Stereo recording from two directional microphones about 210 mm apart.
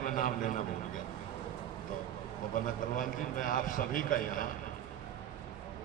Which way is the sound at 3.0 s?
40° left (ahead or behind).